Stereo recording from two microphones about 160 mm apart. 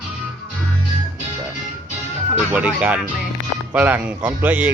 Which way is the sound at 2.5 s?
10° right (ahead or behind).